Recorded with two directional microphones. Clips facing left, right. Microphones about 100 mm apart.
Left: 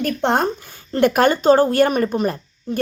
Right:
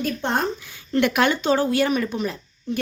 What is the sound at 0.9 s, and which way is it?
Speech, 40° left (ahead or behind).